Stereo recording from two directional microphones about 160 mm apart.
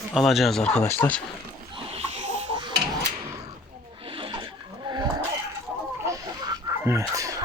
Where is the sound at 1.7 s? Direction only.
35° right (ahead or behind).